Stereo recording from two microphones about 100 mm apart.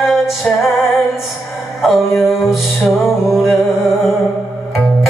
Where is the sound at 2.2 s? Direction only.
Centre (ahead or behind).